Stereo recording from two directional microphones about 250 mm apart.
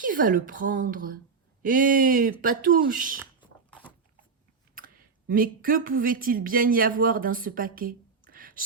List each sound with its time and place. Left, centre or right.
0.0 s speech: right
4.7 s speech: right